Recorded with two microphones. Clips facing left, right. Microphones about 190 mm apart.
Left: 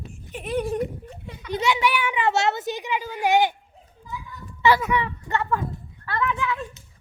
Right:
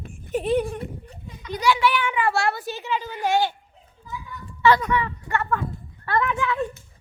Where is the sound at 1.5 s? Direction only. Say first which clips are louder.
Right 1 dB; 20° left (ahead or behind).